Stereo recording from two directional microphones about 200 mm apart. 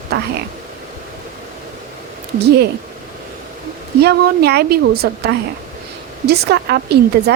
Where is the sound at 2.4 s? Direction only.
55° right (ahead or behind).